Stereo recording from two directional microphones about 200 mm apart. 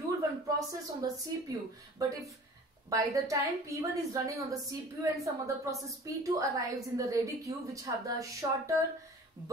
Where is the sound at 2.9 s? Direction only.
15° right (ahead or behind).